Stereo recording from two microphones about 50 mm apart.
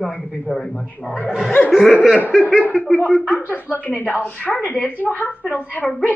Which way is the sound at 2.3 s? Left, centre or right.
Centre.